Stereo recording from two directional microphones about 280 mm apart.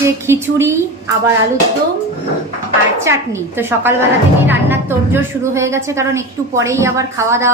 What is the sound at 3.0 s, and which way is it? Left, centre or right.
A woman's voice, centre.